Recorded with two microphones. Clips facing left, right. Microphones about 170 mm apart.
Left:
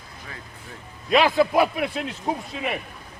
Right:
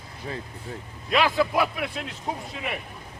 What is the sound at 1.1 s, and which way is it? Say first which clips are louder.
Speech: left 4 dB; 25° left (ahead or behind).